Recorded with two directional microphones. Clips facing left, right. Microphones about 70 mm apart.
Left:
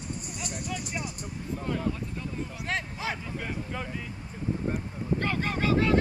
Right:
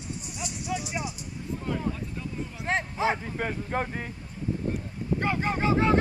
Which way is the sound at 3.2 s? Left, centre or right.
Right.